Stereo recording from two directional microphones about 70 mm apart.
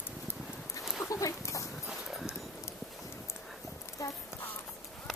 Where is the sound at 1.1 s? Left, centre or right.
Left.